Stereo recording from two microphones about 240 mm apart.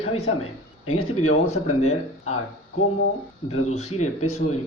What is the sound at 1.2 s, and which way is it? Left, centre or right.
Speech, left.